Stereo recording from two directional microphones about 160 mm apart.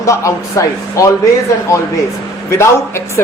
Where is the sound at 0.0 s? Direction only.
20° left (ahead or behind).